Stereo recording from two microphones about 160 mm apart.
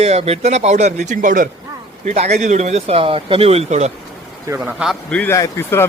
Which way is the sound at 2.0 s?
40° right (ahead or behind).